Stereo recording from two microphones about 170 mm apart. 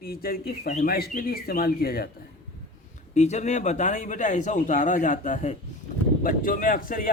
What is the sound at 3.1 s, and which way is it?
A man's voice, 40° left (ahead or behind).